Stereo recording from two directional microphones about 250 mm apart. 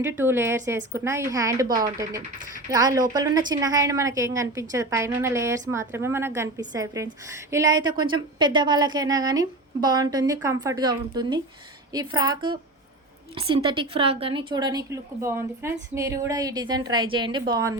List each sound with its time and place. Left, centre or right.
0.0 s a woman's voice: centre